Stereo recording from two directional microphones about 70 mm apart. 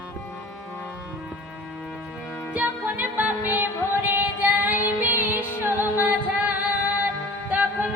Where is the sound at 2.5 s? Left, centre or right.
Right.